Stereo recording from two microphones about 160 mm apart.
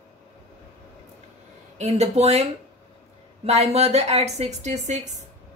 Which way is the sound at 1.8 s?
40° right (ahead or behind).